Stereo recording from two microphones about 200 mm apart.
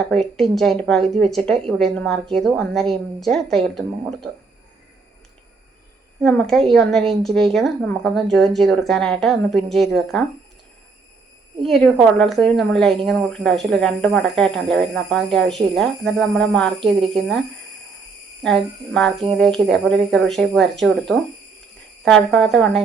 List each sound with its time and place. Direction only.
0.1 s speech: centre (ahead or behind)
6.2 s speech: centre (ahead or behind)
11.6 s speech: centre (ahead or behind)
16.8 s speech: 25° right (ahead or behind)
18.4 s speech: 5° left (ahead or behind)